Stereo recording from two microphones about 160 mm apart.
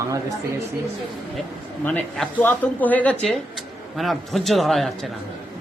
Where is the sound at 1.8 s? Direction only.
10° left (ahead or behind).